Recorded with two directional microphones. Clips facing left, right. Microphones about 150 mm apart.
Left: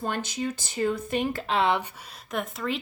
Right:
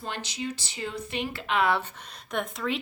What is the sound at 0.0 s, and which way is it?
Speech, 50° left (ahead or behind).